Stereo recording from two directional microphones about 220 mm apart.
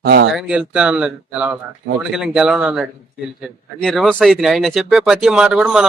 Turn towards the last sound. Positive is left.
turn(degrees=0)  # may be behind; listen again after turning